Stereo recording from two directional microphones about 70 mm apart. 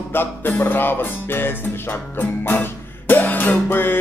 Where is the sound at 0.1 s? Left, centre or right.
Left.